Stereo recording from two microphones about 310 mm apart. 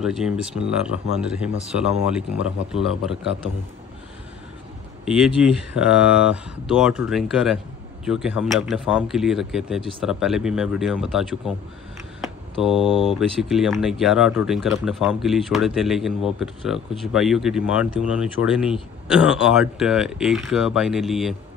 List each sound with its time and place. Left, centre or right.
0.0 s speech: centre
5.0 s speech: centre